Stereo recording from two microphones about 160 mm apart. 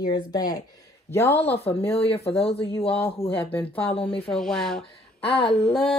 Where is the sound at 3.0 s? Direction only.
10° left (ahead or behind).